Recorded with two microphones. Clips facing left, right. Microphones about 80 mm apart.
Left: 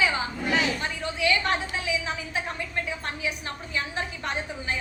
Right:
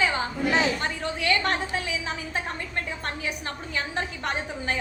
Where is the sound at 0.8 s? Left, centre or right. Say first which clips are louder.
Even; right.